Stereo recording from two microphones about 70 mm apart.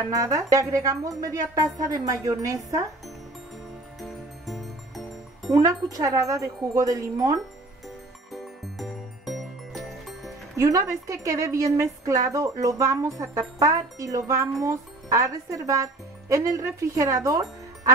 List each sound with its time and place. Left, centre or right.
0.1 s a woman's voice: right
4.0 s music: centre
5.5 s speech: right
8.3 s music: centre
10.6 s a woman's voice: right